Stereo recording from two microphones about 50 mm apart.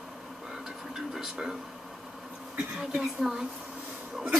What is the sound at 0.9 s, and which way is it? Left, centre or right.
Television, centre.